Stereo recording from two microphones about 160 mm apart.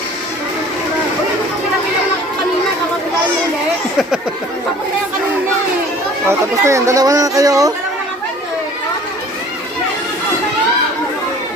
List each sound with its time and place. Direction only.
6.2 s speech: 20° right (ahead or behind)